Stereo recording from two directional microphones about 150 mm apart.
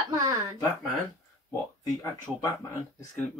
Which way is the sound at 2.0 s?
20° left (ahead or behind).